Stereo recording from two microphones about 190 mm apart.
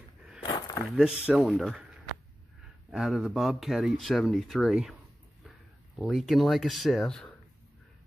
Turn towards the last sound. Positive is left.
turn(degrees=5)  # may be behind; listen again after turning